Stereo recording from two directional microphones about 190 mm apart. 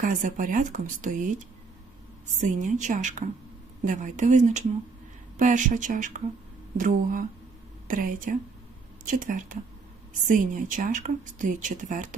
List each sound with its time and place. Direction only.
0.0 s a woman's voice: 45° right (ahead or behind)